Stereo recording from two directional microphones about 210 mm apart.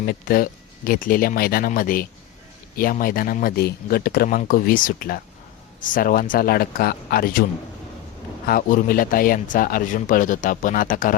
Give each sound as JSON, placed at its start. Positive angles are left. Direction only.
{"t": 0.0, "sound": "a man's voice", "side_deg": 45}
{"t": 8.4, "sound": "speech", "side_deg": 45}